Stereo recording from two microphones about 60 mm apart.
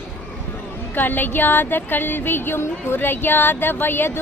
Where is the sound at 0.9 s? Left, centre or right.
Left.